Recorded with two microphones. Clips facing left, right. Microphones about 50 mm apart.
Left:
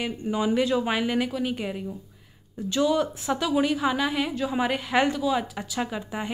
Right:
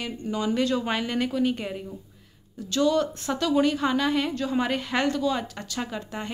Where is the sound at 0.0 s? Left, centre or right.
Centre.